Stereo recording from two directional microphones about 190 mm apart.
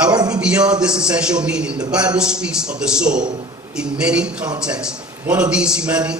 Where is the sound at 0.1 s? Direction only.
20° right (ahead or behind).